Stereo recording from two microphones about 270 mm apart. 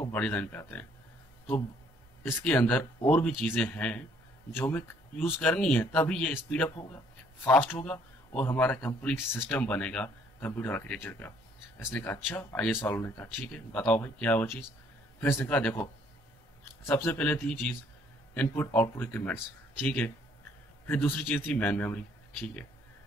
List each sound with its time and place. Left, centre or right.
0.1 s speech: centre
2.2 s speech: centre
20.8 s speech: centre